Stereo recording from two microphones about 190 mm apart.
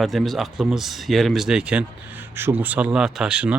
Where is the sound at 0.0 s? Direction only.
Centre (ahead or behind).